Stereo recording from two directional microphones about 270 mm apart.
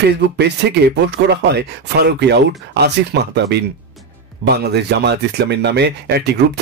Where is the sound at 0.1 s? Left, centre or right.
Right.